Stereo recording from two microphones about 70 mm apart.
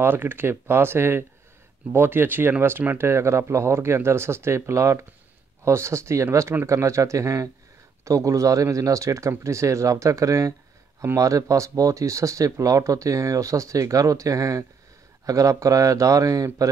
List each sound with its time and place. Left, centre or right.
0.0 s speech: right
3.1 s speech: right